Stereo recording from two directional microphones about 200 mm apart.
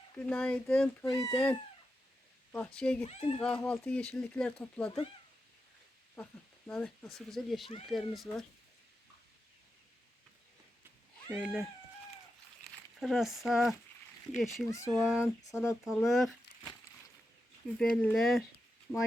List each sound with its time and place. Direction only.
0.2 s speech: 5° left (ahead or behind)
3.0 s speech: 30° left (ahead or behind)
3.4 s speech: 5° left (ahead or behind)
6.7 s speech: 5° left (ahead or behind)
11.3 s speech: centre (ahead or behind)
13.0 s speech: centre (ahead or behind)
14.8 s speech: centre (ahead or behind)
17.7 s speech: 5° left (ahead or behind)